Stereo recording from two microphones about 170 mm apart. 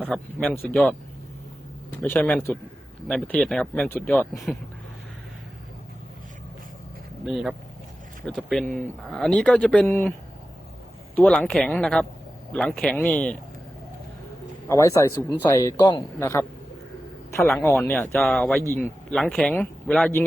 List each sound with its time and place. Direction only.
0.0 s speech: 5° left (ahead or behind)
2.0 s speech: 10° left (ahead or behind)
7.3 s speech: centre (ahead or behind)
11.1 s speech: 5° left (ahead or behind)
14.7 s a man's voice: 15° left (ahead or behind)
16.2 s speech: 15° left (ahead or behind)